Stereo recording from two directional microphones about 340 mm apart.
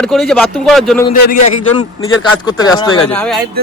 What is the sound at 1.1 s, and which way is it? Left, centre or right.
Speech, left.